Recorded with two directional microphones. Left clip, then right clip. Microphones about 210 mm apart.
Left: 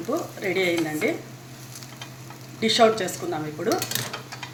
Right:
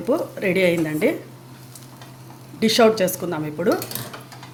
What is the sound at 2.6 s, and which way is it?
Speech, 50° right (ahead or behind).